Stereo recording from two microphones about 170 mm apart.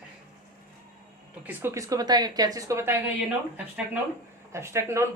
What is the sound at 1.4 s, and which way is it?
Speech, 15° right (ahead or behind).